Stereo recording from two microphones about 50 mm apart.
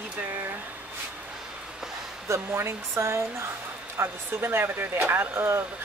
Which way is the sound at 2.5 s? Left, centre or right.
Right.